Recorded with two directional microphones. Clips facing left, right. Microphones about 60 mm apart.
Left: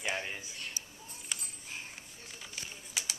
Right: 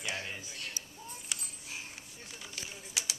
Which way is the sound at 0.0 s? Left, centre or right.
Centre.